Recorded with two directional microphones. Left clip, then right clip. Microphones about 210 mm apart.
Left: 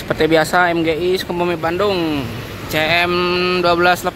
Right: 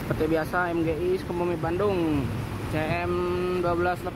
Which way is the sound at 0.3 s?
15° left (ahead or behind).